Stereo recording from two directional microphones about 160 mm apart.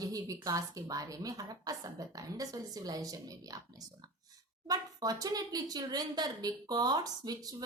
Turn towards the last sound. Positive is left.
turn(degrees=-25)  # may be behind; listen again after turning